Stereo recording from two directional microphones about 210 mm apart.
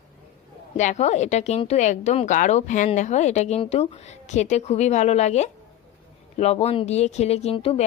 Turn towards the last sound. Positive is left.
turn(degrees=25)  # may be behind; listen again after turning